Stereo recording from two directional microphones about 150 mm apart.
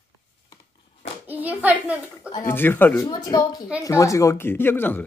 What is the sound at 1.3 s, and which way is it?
A child's voice, 10° right (ahead or behind).